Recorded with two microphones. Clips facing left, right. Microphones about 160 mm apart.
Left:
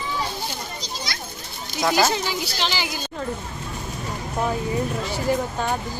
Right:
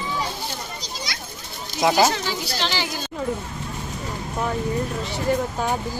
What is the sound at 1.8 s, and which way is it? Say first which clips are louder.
Speech: right 2 dB; 20° right (ahead or behind).